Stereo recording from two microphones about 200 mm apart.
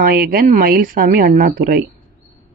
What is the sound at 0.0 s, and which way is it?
Speech, 45° right (ahead or behind).